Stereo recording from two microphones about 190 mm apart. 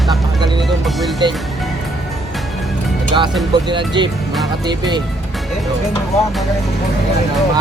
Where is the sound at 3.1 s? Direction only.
25° right (ahead or behind).